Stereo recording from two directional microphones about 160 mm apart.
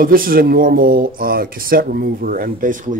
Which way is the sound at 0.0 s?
65° right (ahead or behind).